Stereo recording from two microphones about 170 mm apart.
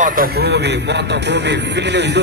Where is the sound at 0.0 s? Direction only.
55° right (ahead or behind).